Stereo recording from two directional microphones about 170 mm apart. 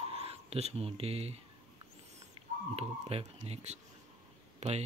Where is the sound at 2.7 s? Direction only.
35° right (ahead or behind).